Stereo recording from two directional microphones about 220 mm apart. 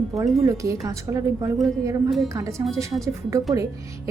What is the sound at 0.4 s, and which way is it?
Speech, 15° right (ahead or behind).